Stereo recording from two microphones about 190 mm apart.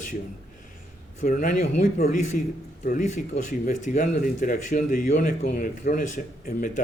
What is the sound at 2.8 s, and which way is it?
A man's voice, 40° left (ahead or behind).